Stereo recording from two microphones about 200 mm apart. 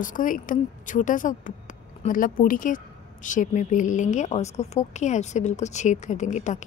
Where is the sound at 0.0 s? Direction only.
40° left (ahead or behind).